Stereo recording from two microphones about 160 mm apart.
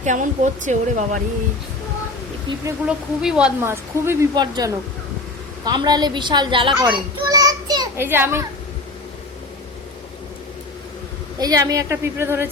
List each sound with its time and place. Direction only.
0.0 s speech: 50° right (ahead or behind)
2.8 s a child's voice: 5° right (ahead or behind); by 7.9 s 25° right (ahead or behind)
7.9 s speech: 15° right (ahead or behind)
11.3 s a child's voice: 25° right (ahead or behind)